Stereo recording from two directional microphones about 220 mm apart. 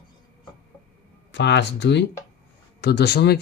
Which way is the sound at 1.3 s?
55° left (ahead or behind).